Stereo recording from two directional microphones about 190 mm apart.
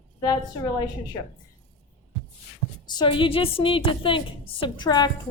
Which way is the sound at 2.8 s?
25° left (ahead or behind).